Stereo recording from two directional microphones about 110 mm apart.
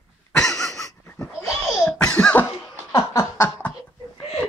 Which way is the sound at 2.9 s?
30° left (ahead or behind).